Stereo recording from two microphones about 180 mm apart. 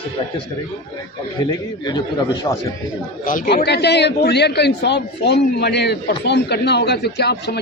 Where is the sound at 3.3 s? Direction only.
50° left (ahead or behind); by 7.5 s 65° left (ahead or behind).